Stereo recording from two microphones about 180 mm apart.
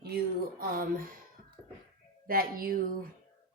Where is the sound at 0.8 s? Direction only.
50° right (ahead or behind).